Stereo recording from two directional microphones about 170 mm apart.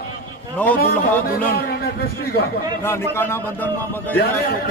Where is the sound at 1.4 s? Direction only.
60° left (ahead or behind).